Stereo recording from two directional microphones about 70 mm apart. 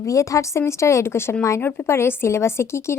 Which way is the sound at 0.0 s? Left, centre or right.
Left.